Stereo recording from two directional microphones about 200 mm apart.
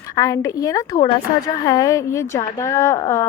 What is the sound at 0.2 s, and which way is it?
A woman's voice, 15° left (ahead or behind).